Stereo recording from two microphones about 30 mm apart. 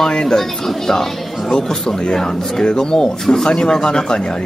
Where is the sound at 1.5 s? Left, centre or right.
Left.